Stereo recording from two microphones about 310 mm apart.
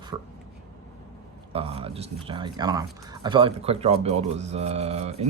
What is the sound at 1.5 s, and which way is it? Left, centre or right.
Speech, centre.